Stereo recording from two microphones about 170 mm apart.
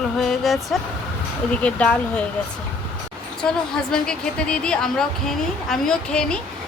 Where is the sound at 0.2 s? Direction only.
Centre (ahead or behind).